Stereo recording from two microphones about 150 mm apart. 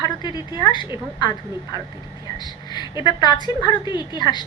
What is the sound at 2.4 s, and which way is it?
A woman's voice, 30° left (ahead or behind).